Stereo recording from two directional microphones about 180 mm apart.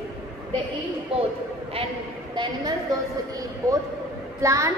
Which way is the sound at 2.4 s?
25° right (ahead or behind).